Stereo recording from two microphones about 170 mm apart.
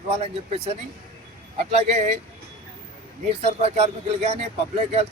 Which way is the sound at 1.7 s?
40° right (ahead or behind).